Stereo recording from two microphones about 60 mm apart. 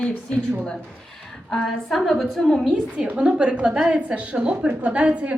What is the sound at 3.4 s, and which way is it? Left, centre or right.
A woman's voice, right.